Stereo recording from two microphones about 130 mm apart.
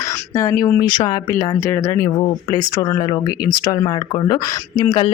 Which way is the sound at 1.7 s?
25° left (ahead or behind).